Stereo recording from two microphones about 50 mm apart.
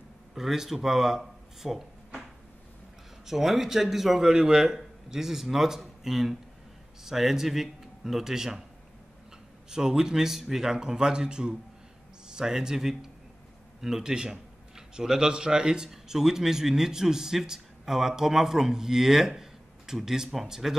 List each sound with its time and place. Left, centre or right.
0.3 s speech: centre
3.3 s speech: centre
9.7 s a man's voice: centre